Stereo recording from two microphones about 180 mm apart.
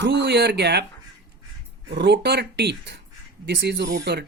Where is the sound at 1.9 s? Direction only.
75° right (ahead or behind).